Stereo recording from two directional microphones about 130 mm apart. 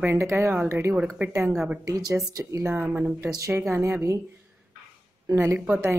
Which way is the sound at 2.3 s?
20° right (ahead or behind).